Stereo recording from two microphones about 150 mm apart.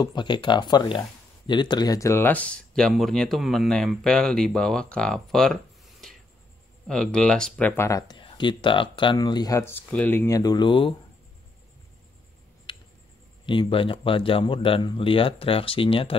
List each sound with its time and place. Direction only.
0.0 s speech: 30° left (ahead or behind)
8.1 s speech: 30° left (ahead or behind)
12.7 s tick: 35° left (ahead or behind)
13.5 s speech: 35° left (ahead or behind)